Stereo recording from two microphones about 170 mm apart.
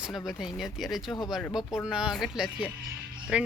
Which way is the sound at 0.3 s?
Centre (ahead or behind).